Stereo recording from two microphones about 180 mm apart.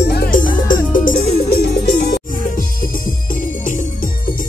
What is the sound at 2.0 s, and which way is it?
Music, 60° left (ahead or behind).